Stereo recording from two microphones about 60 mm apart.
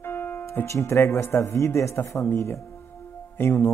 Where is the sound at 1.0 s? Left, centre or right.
Left.